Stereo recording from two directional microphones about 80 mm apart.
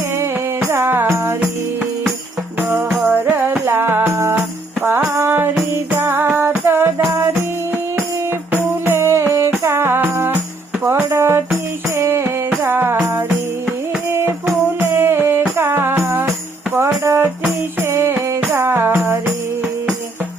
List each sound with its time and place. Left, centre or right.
0.7 s music: right
2.6 s music: right
4.8 s music: right
5.0 s music: right
7.0 s music: right
8.5 s music: right
14.1 s music: right